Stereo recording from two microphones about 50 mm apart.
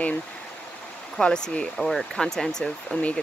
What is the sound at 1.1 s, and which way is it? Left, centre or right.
Speech, centre.